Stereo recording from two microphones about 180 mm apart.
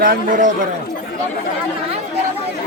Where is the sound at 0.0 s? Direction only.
45° right (ahead or behind).